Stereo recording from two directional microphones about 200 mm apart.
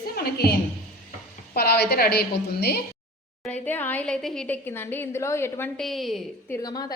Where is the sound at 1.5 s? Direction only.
55° left (ahead or behind).